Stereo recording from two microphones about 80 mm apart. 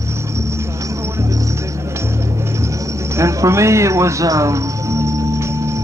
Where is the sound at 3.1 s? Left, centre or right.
Right.